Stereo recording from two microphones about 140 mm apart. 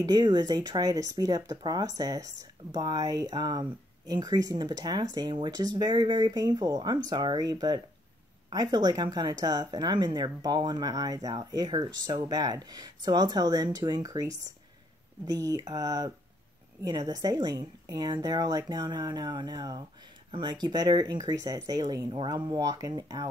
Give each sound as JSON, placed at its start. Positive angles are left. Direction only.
{"t": 0.0, "sound": "speech", "side_deg": -30}